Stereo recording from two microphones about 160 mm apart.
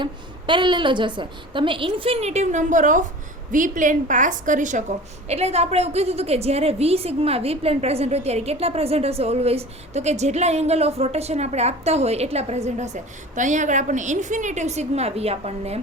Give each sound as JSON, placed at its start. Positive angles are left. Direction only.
{"t": 0.0, "sound": "a woman's voice", "side_deg": -30}